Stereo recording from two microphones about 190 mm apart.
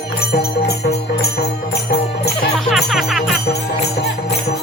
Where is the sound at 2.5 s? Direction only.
Centre (ahead or behind).